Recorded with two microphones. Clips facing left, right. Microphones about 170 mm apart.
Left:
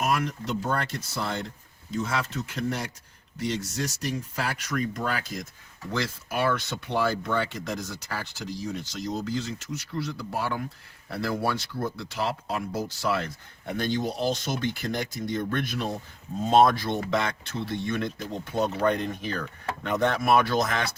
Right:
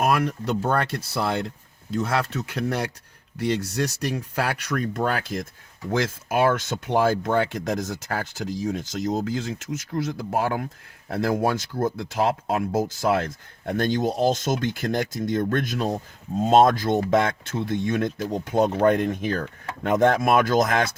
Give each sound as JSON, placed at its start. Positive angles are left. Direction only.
{"t": 0.0, "sound": "speech", "side_deg": -60}
{"t": 5.9, "sound": "speech", "side_deg": -50}